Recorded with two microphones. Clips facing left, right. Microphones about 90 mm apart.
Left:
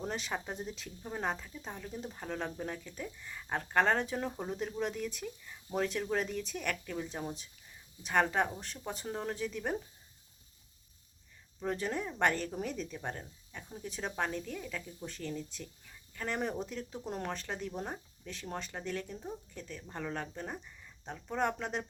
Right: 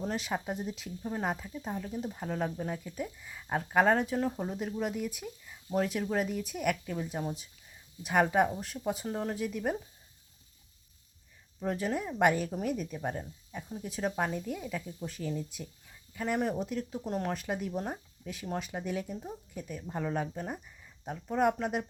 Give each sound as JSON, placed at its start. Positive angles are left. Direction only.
{"t": 0.0, "sound": "speech", "side_deg": 0}
{"t": 11.6, "sound": "speech", "side_deg": -5}